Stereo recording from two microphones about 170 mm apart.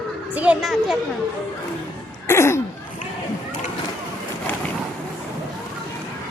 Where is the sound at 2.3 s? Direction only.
15° left (ahead or behind).